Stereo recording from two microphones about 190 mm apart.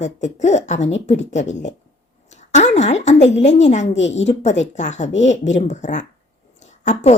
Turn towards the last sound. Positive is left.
turn(degrees=40)  # may be behind; listen again after turning